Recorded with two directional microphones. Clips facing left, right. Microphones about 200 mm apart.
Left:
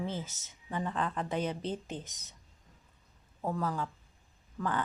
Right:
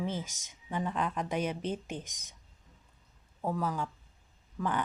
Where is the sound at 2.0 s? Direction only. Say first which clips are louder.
Left 1 dB; 90° right.